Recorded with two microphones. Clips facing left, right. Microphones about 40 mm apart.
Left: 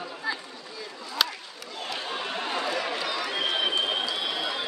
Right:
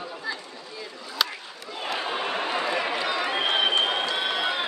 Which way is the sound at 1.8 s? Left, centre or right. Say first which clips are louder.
Right 4 dB; right.